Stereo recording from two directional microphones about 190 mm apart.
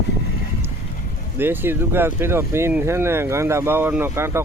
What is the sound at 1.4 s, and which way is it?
Speech, 10° right (ahead or behind).